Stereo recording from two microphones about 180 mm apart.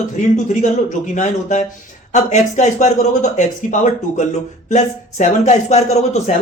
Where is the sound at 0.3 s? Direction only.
40° left (ahead or behind).